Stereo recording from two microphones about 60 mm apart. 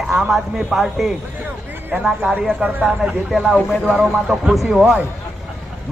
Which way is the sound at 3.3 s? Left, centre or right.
Centre.